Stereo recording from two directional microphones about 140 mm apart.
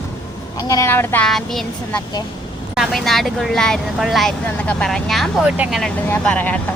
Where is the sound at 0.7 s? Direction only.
20° left (ahead or behind).